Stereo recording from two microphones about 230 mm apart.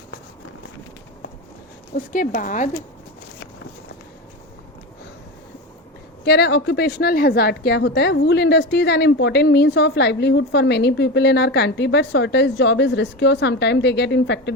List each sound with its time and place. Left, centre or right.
2.1 s a woman's voice: left
6.2 s a woman's voice: left